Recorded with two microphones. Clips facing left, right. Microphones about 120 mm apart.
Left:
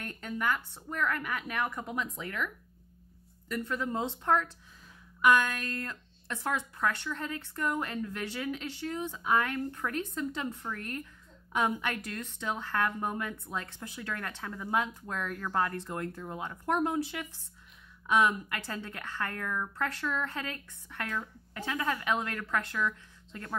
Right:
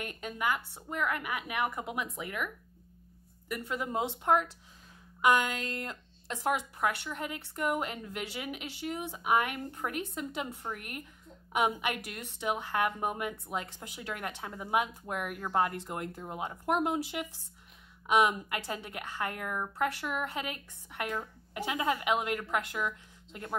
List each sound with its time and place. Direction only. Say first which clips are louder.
0.0 s speech: even; 15° right (ahead or behind)